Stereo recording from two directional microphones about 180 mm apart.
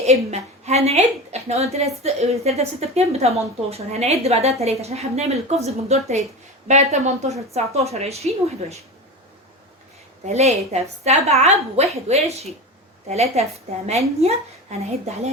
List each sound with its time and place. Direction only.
0.0 s a woman's voice: 40° right (ahead or behind)
10.2 s a woman's voice: 35° right (ahead or behind)